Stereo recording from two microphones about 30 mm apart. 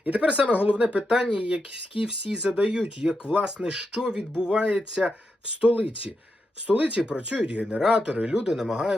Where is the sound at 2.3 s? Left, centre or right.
Centre.